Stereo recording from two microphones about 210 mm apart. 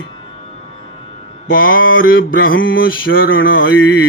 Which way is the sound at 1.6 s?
70° left (ahead or behind).